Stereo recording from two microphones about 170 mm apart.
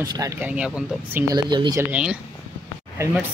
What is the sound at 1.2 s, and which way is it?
Speech, 25° right (ahead or behind).